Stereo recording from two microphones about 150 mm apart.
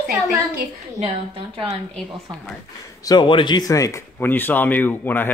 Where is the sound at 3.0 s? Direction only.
30° left (ahead or behind); by 5.3 s 10° left (ahead or behind).